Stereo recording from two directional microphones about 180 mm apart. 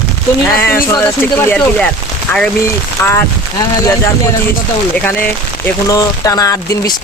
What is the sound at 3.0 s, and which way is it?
Speech, 15° left (ahead or behind).